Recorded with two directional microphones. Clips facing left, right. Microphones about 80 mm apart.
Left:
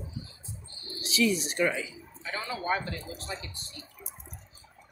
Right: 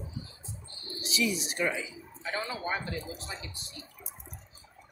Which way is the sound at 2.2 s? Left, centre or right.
Right.